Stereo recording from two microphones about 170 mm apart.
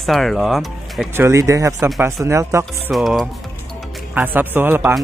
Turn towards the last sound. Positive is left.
turn(degrees=-10)  # may be behind; listen again after turning